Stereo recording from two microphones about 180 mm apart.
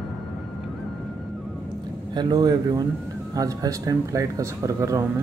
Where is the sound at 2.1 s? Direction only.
25° right (ahead or behind).